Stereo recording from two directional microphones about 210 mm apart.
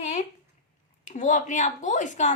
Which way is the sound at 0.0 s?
35° left (ahead or behind).